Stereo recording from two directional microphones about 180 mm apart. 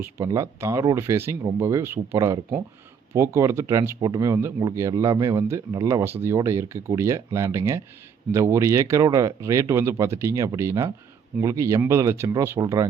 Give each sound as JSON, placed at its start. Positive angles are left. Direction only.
{"t": 0.0, "sound": "speech", "side_deg": -15}